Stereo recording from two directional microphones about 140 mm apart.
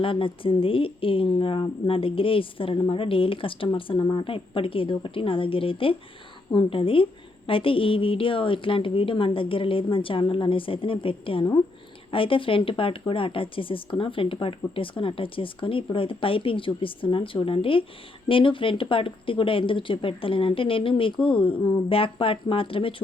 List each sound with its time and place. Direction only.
0.0 s a woman's voice: 40° left (ahead or behind)